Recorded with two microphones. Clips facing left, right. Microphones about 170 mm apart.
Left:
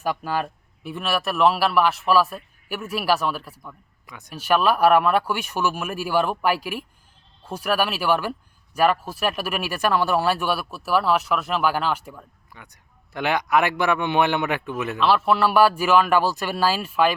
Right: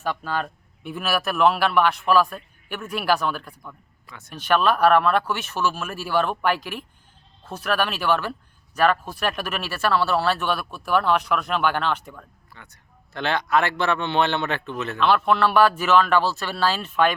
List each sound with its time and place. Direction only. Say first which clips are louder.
0.0 s speech: left 2 dB; 10° left (ahead or behind)
4.0 s speech: left 1 dB; 15° left (ahead or behind)